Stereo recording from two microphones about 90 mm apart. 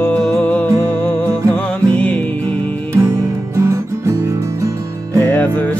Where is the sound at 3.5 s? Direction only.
35° right (ahead or behind).